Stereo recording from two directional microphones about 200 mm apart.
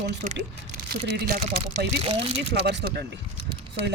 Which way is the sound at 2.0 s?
30° right (ahead or behind).